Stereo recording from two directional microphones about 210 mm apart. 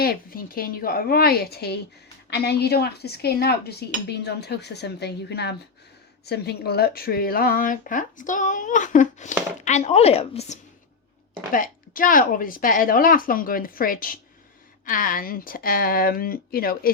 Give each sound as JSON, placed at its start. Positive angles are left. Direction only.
{"t": 0.0, "sound": "speech", "side_deg": 45}
{"t": 11.5, "sound": "speech", "side_deg": 40}